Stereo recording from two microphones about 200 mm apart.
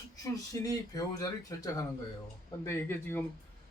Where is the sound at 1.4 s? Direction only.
15° left (ahead or behind).